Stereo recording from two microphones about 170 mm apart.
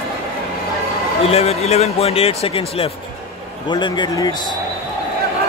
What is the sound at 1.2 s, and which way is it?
A man's voice, 35° left (ahead or behind).